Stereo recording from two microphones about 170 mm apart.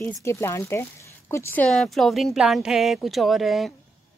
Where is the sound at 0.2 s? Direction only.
15° left (ahead or behind).